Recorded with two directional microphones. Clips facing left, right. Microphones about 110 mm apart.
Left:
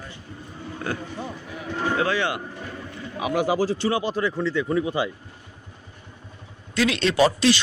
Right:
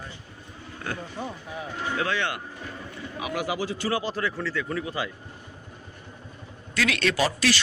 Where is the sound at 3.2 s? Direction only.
30° left (ahead or behind).